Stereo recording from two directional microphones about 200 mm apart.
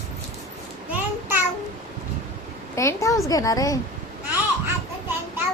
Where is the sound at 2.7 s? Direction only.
15° left (ahead or behind).